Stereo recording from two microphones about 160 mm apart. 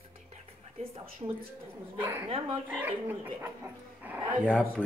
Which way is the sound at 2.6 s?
10° right (ahead or behind).